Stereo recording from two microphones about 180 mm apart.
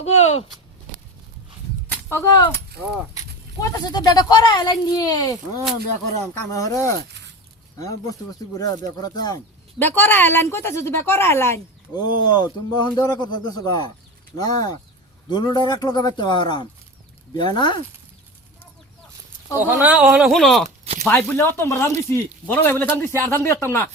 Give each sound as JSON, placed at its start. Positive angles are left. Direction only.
{"t": 0.0, "sound": "speech", "side_deg": 35}
{"t": 1.9, "sound": "speech", "side_deg": 15}
{"t": 3.6, "sound": "speech", "side_deg": 20}
{"t": 6.5, "sound": "a woman's voice", "side_deg": 15}
{"t": 7.1, "sound": "a sound", "side_deg": -75}
{"t": 7.8, "sound": "speech", "side_deg": 20}
{"t": 9.7, "sound": "a woman's voice", "side_deg": 10}
{"t": 19.5, "sound": "speech", "side_deg": -10}
{"t": 20.7, "sound": "a sound", "side_deg": -35}
{"t": 21.0, "sound": "a woman's voice", "side_deg": 10}